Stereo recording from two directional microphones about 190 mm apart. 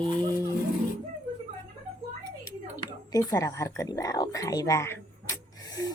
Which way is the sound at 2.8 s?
20° left (ahead or behind).